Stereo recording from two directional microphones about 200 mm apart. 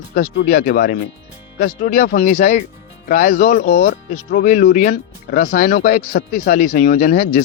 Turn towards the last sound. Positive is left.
turn(degrees=40)  # may be behind; listen again after turning